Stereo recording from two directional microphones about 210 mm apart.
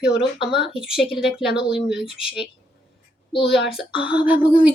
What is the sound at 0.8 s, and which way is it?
Speech, centre (ahead or behind).